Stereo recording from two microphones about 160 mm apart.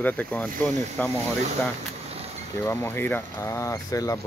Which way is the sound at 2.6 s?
15° left (ahead or behind).